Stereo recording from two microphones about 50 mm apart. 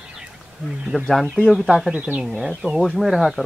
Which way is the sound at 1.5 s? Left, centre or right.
Centre.